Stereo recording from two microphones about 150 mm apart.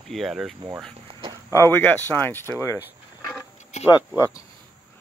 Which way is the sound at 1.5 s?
15° left (ahead or behind).